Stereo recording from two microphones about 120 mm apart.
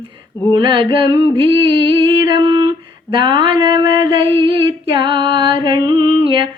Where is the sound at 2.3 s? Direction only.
45° right (ahead or behind).